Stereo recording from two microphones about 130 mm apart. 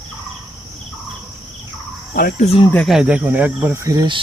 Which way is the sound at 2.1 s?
90° left.